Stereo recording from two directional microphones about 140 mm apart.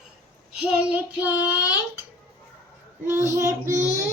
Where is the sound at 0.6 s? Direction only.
10° right (ahead or behind).